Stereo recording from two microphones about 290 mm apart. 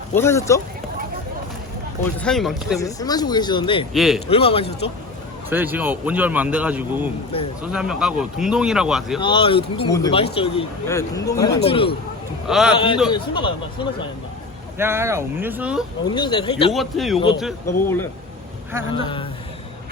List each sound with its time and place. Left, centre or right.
0.1 s speech: centre
2.1 s a man's voice: centre
2.8 s speech: centre
3.9 s a man's voice: centre
4.3 s speech: centre
5.5 s a man's voice: centre
9.2 s speech: centre
12.5 s a man's voice: centre
12.7 s speech: centre
14.8 s speech: centre
16.0 s speech: centre
16.7 s a man's voice: centre
17.2 s speech: centre